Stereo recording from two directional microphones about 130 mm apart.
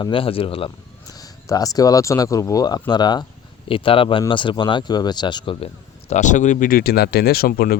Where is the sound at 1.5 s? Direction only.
30° left (ahead or behind).